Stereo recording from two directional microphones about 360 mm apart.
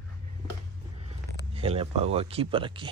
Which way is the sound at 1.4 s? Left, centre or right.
Centre.